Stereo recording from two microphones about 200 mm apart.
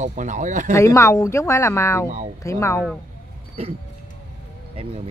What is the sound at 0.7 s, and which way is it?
Speech, 15° left (ahead or behind).